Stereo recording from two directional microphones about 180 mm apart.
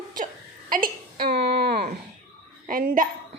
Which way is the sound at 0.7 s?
50° right (ahead or behind).